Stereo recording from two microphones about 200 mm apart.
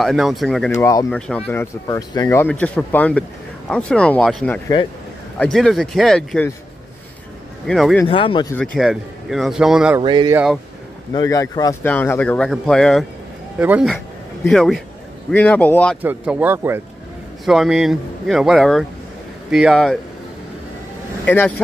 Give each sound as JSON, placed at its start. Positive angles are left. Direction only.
{"t": 0.0, "sound": "speech", "side_deg": 0}
{"t": 0.7, "sound": "speech", "side_deg": 15}
{"t": 1.1, "sound": "speech", "side_deg": 5}
{"t": 7.6, "sound": "speech", "side_deg": 0}
{"t": 8.1, "sound": "speech", "side_deg": 25}
{"t": 8.5, "sound": "speech", "side_deg": 0}
{"t": 9.9, "sound": "speech", "side_deg": -20}
{"t": 10.3, "sound": "speech", "side_deg": -5}
{"t": 11.1, "sound": "speech", "side_deg": 15}
{"t": 13.6, "sound": "speech", "side_deg": -10}
{"t": 14.4, "sound": "speech", "side_deg": 5}
{"t": 16.0, "sound": "speech", "side_deg": -10}
{"t": 21.3, "sound": "speech", "side_deg": 10}